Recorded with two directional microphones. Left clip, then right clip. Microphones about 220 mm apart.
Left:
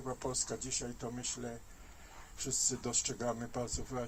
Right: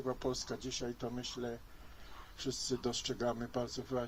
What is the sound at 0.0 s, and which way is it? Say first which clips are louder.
Speech: right 1 dB; 50° right (ahead or behind).